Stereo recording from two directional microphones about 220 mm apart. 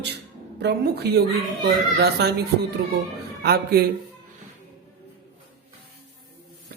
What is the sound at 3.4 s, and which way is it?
Speech, 45° right (ahead or behind).